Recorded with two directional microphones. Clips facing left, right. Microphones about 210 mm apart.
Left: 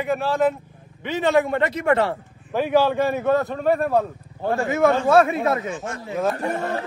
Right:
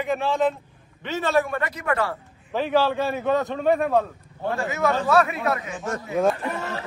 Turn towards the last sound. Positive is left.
turn(degrees=50)  # may be behind; listen again after turning